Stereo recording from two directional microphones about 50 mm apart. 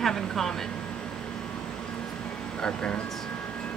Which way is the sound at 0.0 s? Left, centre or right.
Centre.